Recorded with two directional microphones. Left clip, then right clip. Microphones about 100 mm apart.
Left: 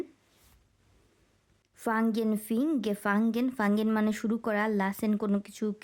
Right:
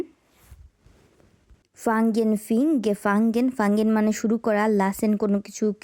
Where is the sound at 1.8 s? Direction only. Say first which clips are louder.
Right 7 dB; 30° right (ahead or behind).